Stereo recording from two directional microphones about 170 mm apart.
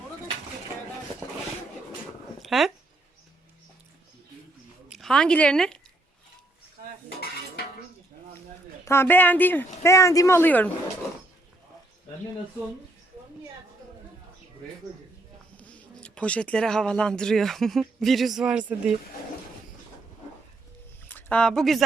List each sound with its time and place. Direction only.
2.4 s a sound: centre (ahead or behind)
4.9 s speech: centre (ahead or behind)
8.8 s speech: 15° left (ahead or behind)
15.5 s speech: 10° left (ahead or behind)
21.1 s speech: 10° left (ahead or behind)